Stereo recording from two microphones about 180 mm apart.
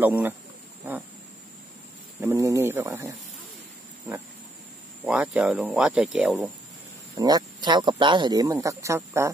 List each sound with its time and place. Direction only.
0.0 s speech: 10° right (ahead or behind)
2.1 s speech: 15° right (ahead or behind)
5.0 s speech: 5° right (ahead or behind)
7.2 s speech: 20° right (ahead or behind)